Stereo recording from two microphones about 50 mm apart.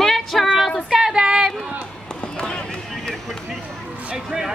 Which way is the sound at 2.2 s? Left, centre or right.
Centre.